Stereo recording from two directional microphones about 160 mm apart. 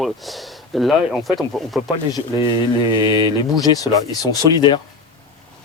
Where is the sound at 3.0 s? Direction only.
30° left (ahead or behind).